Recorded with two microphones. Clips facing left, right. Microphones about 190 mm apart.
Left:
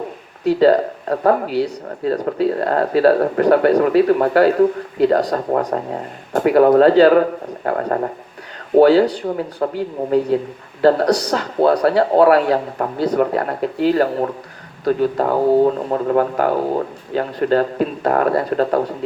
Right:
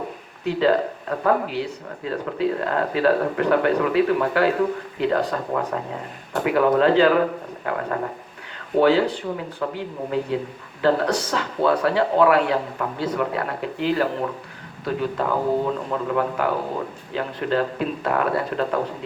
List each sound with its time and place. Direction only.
0.4 s speech: 40° left (ahead or behind)